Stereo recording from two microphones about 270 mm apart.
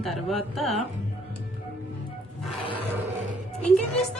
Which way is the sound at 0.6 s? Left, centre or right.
Left.